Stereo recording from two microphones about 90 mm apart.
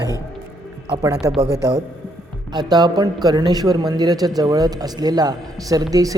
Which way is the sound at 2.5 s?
50° right (ahead or behind).